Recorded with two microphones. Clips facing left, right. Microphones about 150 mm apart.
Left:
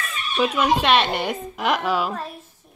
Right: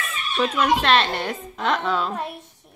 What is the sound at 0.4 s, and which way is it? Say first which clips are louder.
A woman's voice: left 1 dB; 10° left (ahead or behind).